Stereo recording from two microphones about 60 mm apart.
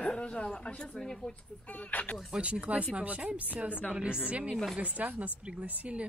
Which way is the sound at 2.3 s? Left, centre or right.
Centre.